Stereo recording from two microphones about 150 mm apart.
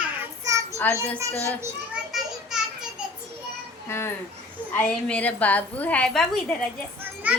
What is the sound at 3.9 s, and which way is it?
A woman's voice, 15° left (ahead or behind).